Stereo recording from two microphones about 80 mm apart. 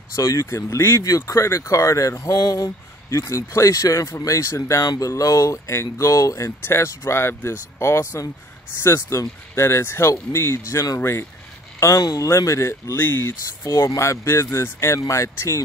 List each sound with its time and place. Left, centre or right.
0.1 s speech: left
1.0 s speech: left
4.8 s speech: left
12.0 s speech: left
12.9 s speech: left
13.7 s speech: left